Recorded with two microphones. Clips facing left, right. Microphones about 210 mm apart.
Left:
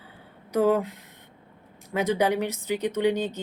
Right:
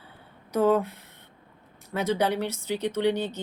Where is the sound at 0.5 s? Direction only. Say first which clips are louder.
Even; 15° left (ahead or behind).